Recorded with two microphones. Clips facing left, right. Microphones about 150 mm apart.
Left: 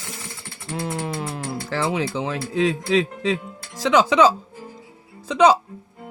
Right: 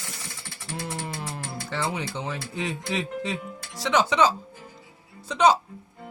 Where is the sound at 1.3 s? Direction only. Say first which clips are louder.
Left 6 dB; 90° left.